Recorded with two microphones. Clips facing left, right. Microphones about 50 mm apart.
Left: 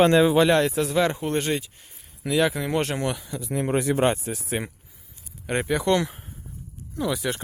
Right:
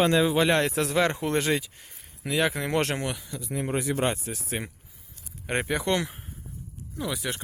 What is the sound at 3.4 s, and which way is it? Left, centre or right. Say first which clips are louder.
Speech: left 5 dB; left.